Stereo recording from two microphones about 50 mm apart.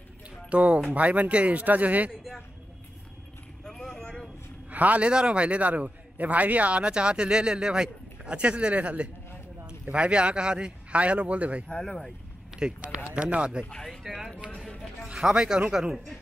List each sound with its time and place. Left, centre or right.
0.5 s a man's voice: right
3.6 s vehicle: centre
4.6 s a man's voice: right
11.8 s speech: centre
12.5 s a man's voice: centre
13.7 s speech: centre
14.0 s speech: centre